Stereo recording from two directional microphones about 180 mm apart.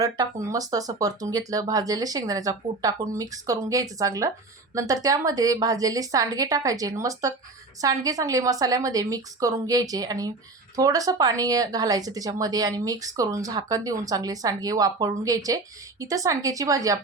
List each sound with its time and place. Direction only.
0.0 s a woman's voice: 20° right (ahead or behind)